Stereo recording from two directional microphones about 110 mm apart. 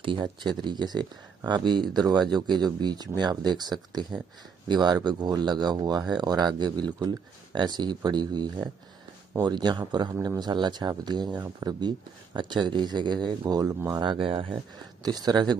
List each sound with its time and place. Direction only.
0.0 s speech: 45° right (ahead or behind)
15.0 s speech: 40° right (ahead or behind)